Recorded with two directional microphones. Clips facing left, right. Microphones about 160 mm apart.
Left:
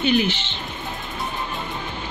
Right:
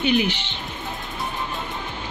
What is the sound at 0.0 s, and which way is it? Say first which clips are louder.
Speech: left 1 dB; 15° right (ahead or behind).